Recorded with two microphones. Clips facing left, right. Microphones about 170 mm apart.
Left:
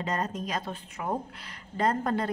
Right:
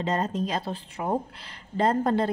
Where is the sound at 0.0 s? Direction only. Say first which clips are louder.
Right 4 dB; 25° right (ahead or behind).